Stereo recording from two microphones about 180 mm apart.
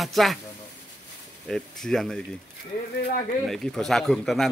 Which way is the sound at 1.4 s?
5° left (ahead or behind).